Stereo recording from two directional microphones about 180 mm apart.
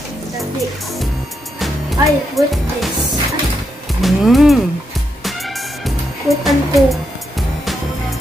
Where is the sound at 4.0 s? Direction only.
Centre (ahead or behind).